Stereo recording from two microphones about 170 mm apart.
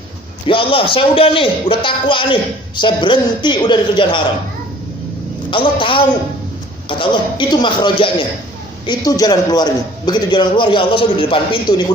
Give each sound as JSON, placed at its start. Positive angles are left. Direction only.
{"t": 0.4, "sound": "a man's voice", "side_deg": 30}
{"t": 5.5, "sound": "a man's voice", "side_deg": 30}